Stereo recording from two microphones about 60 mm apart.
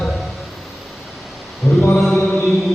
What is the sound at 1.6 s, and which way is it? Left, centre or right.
Mantra, centre.